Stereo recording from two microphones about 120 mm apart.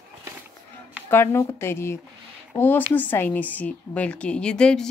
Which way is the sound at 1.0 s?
20° left (ahead or behind).